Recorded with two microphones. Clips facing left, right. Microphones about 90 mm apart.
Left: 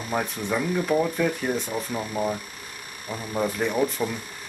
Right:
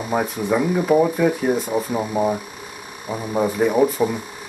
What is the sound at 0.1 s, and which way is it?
Speech, 10° right (ahead or behind).